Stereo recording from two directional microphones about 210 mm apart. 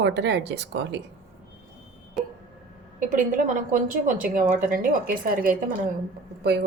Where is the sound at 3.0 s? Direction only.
40° right (ahead or behind).